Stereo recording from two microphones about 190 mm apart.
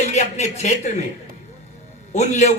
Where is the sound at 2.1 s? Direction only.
35° left (ahead or behind).